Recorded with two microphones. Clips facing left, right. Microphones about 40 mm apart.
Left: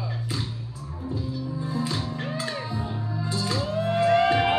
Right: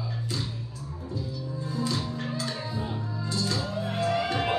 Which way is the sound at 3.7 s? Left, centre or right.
Left.